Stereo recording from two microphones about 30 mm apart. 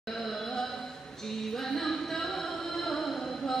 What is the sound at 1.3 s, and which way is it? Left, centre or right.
Music, centre.